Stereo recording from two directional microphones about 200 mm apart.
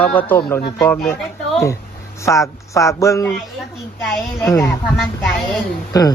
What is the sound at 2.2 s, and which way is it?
Speech, 15° left (ahead or behind).